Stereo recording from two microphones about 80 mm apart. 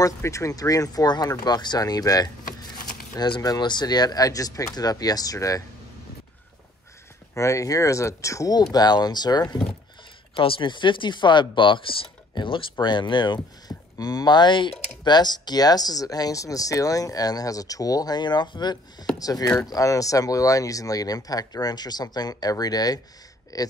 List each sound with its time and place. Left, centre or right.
0.0 s speech: left
3.2 s speech: left
3.4 s speech: left
7.3 s speech: left
8.7 s speech: left
10.3 s speech: left
12.8 s speech: left
13.7 s speech: left
19.1 s speech: left